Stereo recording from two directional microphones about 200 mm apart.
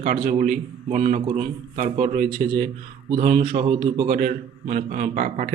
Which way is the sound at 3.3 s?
35° right (ahead or behind).